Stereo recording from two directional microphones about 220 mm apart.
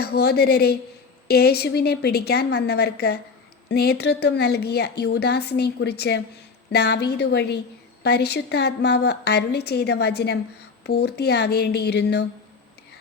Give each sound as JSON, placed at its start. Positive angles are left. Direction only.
{"t": 0.0, "sound": "a woman's voice", "side_deg": 45}